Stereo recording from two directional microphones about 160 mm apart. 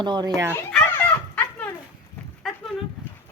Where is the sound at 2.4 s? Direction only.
Centre (ahead or behind).